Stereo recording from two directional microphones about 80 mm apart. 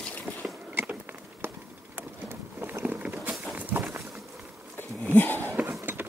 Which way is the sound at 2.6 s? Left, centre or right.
Right.